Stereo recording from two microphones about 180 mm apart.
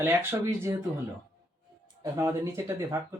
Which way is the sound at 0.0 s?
15° right (ahead or behind).